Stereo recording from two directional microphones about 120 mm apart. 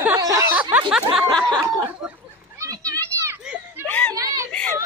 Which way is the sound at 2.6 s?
30° right (ahead or behind).